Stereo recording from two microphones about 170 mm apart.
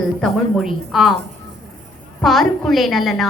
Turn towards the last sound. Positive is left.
turn(degrees=0)  # may be behind; listen again after turning